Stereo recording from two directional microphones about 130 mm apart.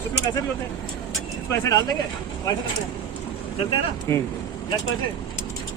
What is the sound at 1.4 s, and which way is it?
Speech, 25° left (ahead or behind).